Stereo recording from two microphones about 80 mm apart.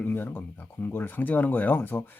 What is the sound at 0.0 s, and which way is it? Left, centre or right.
Speech, left.